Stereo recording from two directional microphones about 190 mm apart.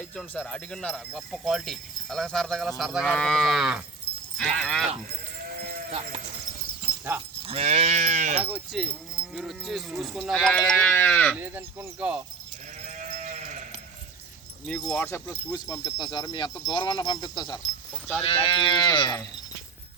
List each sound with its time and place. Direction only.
0.0 s speech: 5° left (ahead or behind)
6.9 s dog: 15° left (ahead or behind)
7.4 s livestock: 35° right (ahead or behind)
8.4 s speech: 5° right (ahead or behind)
11.3 s speech: 10° right (ahead or behind)
13.0 s sheep: 40° right (ahead or behind)
14.7 s speech: 5° left (ahead or behind); by 19.2 s 25° left (ahead or behind)